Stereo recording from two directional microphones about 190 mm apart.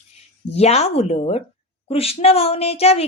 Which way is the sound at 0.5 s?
35° left (ahead or behind).